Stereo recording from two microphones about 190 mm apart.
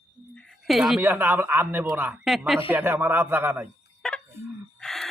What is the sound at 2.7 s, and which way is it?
Speech, 10° right (ahead or behind).